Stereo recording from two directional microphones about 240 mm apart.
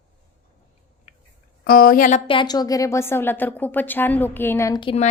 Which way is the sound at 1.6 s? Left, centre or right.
Left.